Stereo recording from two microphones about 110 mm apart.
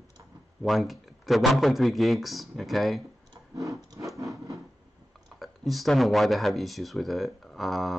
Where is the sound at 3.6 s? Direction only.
30° right (ahead or behind).